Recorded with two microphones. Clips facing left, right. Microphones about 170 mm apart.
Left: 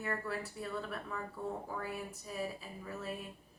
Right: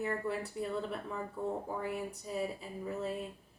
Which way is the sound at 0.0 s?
25° right (ahead or behind).